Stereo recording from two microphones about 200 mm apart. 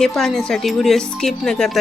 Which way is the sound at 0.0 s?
Centre (ahead or behind).